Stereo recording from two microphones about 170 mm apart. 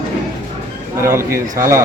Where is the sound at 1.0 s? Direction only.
15° right (ahead or behind).